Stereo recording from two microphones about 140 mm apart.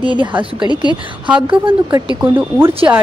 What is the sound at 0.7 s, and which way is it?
Speech, 30° left (ahead or behind).